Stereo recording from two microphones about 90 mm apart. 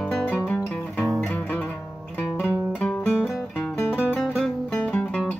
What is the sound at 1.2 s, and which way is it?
Music, 20° left (ahead or behind).